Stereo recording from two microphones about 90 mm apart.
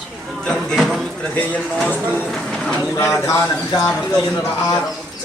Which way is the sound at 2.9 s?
30° left (ahead or behind).